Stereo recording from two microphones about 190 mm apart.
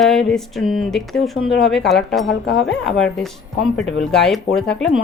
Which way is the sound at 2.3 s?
65° left (ahead or behind).